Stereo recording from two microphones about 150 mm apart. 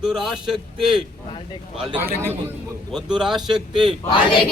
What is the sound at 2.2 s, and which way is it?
Speech, 15° right (ahead or behind).